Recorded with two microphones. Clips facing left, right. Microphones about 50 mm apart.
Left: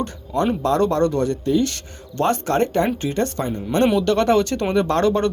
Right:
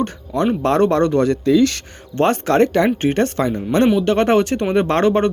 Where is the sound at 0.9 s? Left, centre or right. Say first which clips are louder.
Right 4 dB; right.